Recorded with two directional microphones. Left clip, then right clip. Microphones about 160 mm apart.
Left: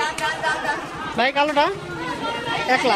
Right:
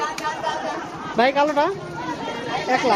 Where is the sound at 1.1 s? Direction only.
10° right (ahead or behind).